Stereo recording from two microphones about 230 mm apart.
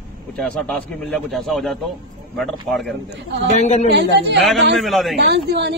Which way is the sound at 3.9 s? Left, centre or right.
Right.